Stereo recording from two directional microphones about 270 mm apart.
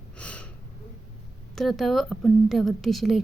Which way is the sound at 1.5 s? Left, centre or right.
Centre.